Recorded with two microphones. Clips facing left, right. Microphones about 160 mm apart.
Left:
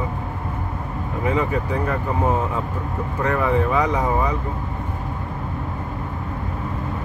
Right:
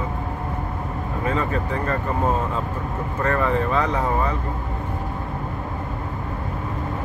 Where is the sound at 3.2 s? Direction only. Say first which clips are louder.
Left 1 dB; 10° left (ahead or behind).